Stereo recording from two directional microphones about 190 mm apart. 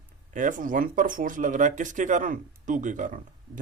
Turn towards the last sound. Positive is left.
turn(degrees=-40)  # may be behind; listen again after turning